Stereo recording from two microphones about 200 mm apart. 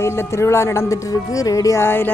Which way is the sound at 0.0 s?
15° left (ahead or behind).